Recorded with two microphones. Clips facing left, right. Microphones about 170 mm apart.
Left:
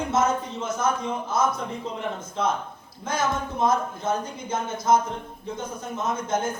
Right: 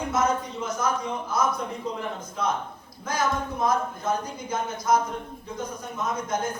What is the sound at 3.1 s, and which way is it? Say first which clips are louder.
A man's voice: even; 25° left (ahead or behind).